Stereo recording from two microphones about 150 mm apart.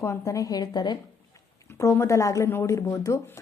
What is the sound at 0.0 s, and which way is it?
Speech, 20° left (ahead or behind).